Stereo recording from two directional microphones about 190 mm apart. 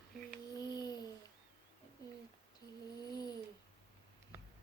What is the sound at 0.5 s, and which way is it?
Child singing, 20° left (ahead or behind).